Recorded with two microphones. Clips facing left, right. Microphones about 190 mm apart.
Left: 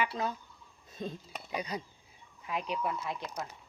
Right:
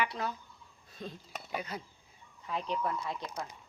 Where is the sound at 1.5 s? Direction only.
15° left (ahead or behind).